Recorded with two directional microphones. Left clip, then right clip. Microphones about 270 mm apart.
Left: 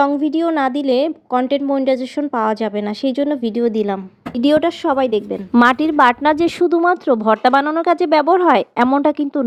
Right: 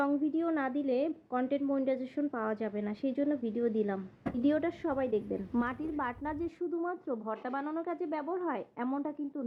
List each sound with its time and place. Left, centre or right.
0.0 s a woman's voice: left